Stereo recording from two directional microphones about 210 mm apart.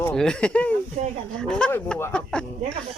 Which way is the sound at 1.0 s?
30° right (ahead or behind).